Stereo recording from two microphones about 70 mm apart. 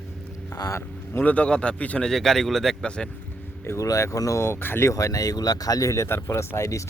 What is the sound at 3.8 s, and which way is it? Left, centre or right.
Speech, left.